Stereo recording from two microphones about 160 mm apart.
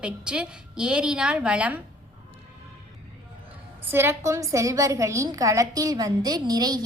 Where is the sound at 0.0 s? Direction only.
5° right (ahead or behind).